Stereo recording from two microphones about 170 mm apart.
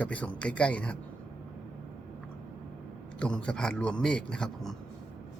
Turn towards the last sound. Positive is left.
turn(degrees=5)  # may be behind; listen again after turning